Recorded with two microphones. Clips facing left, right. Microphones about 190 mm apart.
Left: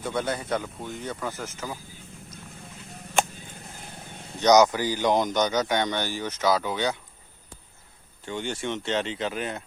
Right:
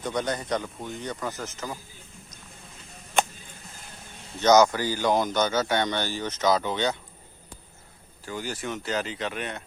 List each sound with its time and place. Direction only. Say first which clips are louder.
0.0 s speech: even; 5° left (ahead or behind)
4.4 s speech: even; 15° left (ahead or behind)
8.2 s speech: left 2 dB; 25° left (ahead or behind)